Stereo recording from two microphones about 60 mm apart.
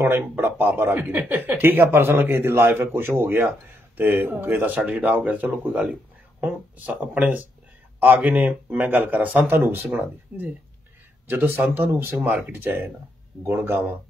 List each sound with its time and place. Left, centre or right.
0.4 s speech: right
7.2 s speech: right
9.5 s speech: right
9.8 s speech: right
11.2 s speech: right
12.3 s speech: right